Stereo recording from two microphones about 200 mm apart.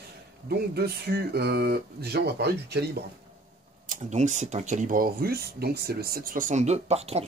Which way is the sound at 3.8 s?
40° right (ahead or behind).